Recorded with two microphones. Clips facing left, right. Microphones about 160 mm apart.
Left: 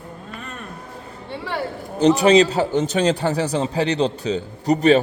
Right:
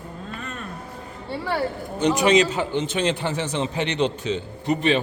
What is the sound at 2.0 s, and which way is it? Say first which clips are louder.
A man's voice: left 4 dB; 30° left (ahead or behind).